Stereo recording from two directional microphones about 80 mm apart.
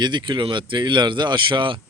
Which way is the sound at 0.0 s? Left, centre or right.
Right.